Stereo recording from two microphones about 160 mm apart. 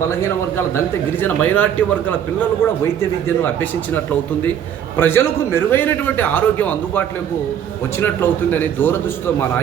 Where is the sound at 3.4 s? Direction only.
10° left (ahead or behind).